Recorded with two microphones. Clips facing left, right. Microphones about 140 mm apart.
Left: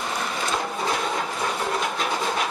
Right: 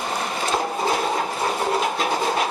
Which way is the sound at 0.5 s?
35° right (ahead or behind).